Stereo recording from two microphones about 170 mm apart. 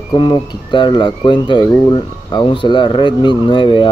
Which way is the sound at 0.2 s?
30° left (ahead or behind).